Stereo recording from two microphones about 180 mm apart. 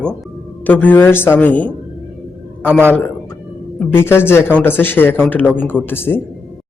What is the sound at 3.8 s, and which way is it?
Speech, 10° left (ahead or behind).